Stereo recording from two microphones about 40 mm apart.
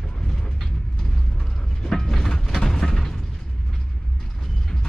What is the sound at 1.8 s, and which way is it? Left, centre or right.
Vehicle, centre.